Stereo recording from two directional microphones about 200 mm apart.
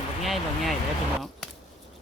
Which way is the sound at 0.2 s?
Centre (ahead or behind).